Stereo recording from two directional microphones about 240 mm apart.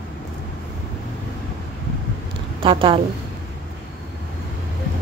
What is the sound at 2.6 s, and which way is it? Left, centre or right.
Speech, right.